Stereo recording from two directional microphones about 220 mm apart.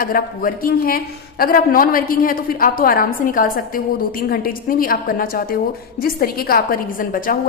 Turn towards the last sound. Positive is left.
turn(degrees=40)  # may be behind; listen again after turning